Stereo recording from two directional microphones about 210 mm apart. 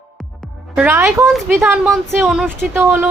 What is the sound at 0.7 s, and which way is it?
A woman's voice, 5° right (ahead or behind).